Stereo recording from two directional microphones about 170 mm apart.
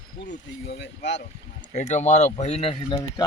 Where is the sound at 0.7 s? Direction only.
90° left.